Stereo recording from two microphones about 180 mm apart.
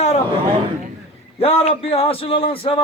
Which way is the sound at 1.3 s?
35° left (ahead or behind).